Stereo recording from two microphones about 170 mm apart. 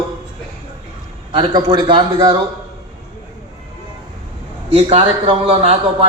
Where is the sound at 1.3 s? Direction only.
25° right (ahead or behind).